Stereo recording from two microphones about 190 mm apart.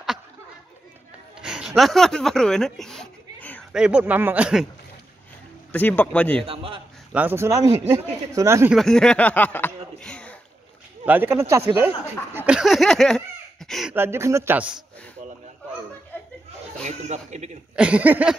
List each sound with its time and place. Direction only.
1.4 s speech: 5° right (ahead or behind)
3.7 s speech: 5° right (ahead or behind)
5.7 s a man's voice: 10° left (ahead or behind)
6.4 s a man's voice: 30° right (ahead or behind)
7.1 s speech: 10° right (ahead or behind)
8.7 s a sound: 5° left (ahead or behind)
11.1 s speech: 10° right (ahead or behind)
12.4 s a sound: 5° right (ahead or behind)
13.9 s speech: 15° right (ahead or behind)
16.1 s chuckle: 10° left (ahead or behind)
16.8 s speech: 35° right (ahead or behind)
17.7 s speech: 5° right (ahead or behind)